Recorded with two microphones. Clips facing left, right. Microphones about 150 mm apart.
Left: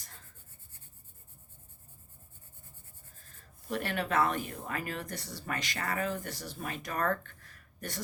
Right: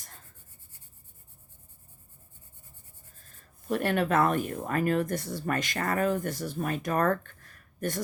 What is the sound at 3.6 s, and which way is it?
Speech, 45° right (ahead or behind).